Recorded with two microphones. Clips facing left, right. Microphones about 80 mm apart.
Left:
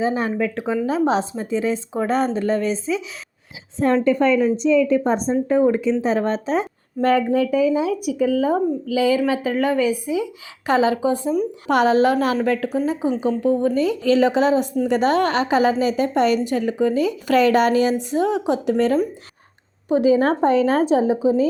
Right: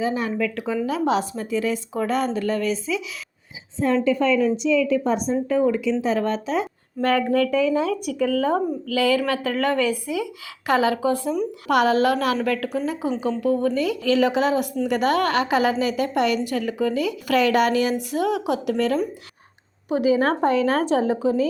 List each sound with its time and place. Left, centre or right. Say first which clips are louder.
0.0 s a woman's voice: left 3 dB; left
3.8 s a woman's voice: left 3 dB; left
7.5 s a woman's voice: left 2 dB; centre